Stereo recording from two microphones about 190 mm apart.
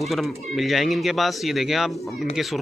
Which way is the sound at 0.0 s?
Centre (ahead or behind).